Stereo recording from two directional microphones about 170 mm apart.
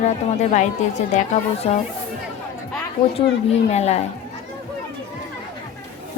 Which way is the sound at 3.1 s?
40° left (ahead or behind).